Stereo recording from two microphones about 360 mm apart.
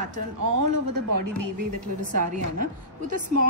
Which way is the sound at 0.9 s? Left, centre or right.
Right.